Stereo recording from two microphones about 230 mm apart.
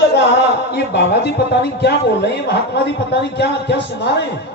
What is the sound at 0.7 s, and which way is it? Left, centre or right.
Speech, left.